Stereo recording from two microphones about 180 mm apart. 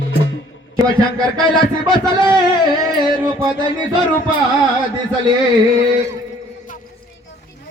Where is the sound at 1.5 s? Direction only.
25° left (ahead or behind).